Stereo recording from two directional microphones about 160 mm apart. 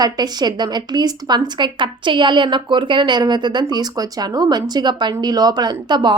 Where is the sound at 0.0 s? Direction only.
25° right (ahead or behind).